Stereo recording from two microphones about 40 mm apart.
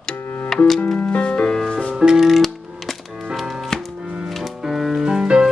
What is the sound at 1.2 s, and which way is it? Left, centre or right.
Music, left.